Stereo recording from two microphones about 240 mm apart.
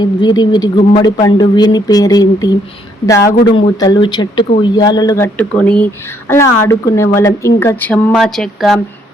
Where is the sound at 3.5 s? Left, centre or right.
Centre.